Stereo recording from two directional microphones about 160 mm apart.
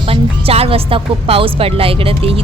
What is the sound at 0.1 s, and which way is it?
A woman's voice, 35° right (ahead or behind).